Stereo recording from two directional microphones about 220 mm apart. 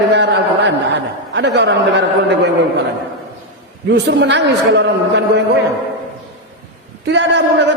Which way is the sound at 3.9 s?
50° right (ahead or behind).